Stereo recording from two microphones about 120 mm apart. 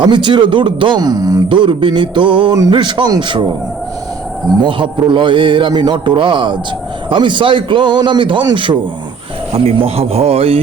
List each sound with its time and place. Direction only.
0.0 s speech: 40° right (ahead or behind)
4.6 s a man's voice: 40° right (ahead or behind)
9.5 s a man's voice: 55° right (ahead or behind)